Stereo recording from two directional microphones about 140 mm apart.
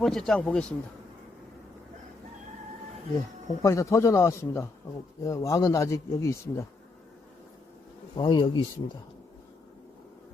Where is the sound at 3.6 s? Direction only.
20° left (ahead or behind).